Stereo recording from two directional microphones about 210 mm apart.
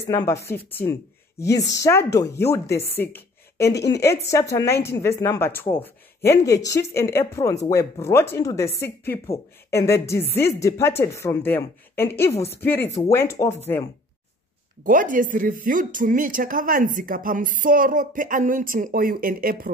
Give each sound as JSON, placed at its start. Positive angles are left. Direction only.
{"t": 0.1, "sound": "speech", "side_deg": 15}
{"t": 14.8, "sound": "speech", "side_deg": -40}